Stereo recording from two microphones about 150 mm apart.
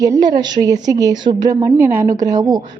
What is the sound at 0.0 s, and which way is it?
A woman's voice, 25° right (ahead or behind).